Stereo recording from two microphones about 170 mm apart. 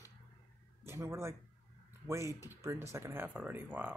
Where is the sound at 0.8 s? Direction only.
15° right (ahead or behind).